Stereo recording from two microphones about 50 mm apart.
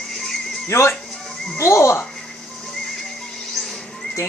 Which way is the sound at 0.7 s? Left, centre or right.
Left.